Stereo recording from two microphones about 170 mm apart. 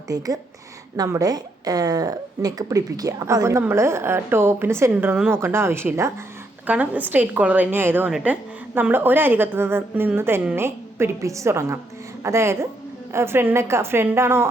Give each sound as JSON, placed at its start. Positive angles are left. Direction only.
{"t": 0.1, "sound": "a woman's voice", "side_deg": -20}